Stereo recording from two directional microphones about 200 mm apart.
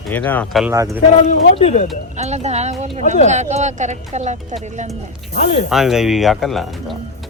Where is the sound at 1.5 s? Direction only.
30° left (ahead or behind).